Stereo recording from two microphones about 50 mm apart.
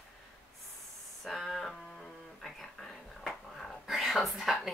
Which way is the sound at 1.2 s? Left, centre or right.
Centre.